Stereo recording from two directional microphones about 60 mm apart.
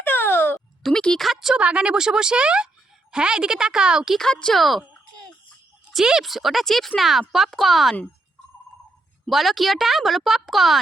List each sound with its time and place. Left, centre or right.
0.0 s a sound: left
0.8 s speech: centre
1.2 s speech: centre
1.5 s speech: centre
4.2 s speech: centre
4.5 s speech: centre
5.9 s speech: centre
9.3 s speech: centre